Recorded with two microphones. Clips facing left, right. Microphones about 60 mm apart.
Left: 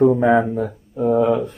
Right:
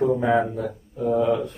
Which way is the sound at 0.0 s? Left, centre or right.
Left.